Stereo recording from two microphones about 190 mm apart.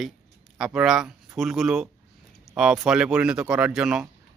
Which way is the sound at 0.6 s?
5° right (ahead or behind).